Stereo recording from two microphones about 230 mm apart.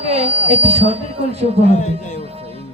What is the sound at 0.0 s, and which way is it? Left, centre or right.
A woman's voice, right.